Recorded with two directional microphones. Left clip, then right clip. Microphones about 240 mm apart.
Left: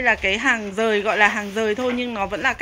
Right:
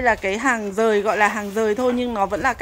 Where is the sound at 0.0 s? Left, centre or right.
Centre.